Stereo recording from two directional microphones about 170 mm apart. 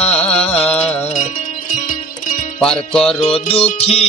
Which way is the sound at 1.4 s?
45° left (ahead or behind).